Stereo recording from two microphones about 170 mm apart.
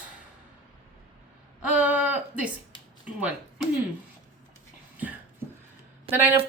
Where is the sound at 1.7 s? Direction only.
5° right (ahead or behind).